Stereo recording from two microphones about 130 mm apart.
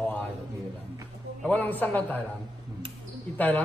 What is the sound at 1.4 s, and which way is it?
Speech, 15° left (ahead or behind).